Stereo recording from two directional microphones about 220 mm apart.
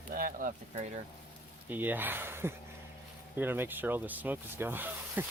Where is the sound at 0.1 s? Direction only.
40° right (ahead or behind).